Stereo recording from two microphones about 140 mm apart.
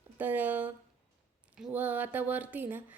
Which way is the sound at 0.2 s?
10° right (ahead or behind).